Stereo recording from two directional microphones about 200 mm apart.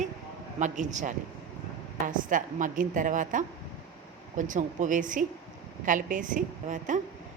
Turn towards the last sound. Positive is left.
turn(degrees=-40)  # may be behind; listen again after turning